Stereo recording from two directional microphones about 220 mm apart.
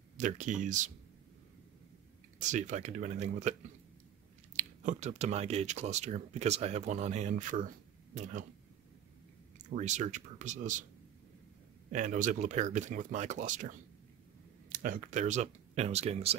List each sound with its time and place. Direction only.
0.2 s speech: 35° right (ahead or behind)
2.4 s speech: 35° right (ahead or behind)
4.6 s speech: 30° right (ahead or behind)
9.8 s speech: 30° right (ahead or behind)
11.9 s speech: 35° right (ahead or behind)